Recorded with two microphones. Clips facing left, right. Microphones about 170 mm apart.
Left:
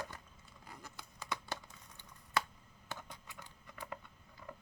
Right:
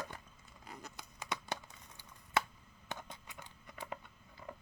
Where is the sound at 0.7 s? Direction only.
20° right (ahead or behind).